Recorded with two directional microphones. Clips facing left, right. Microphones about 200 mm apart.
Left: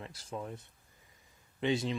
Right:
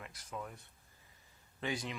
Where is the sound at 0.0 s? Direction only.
30° left (ahead or behind).